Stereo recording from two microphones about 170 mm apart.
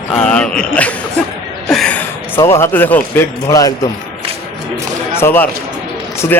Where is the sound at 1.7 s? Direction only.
5° left (ahead or behind).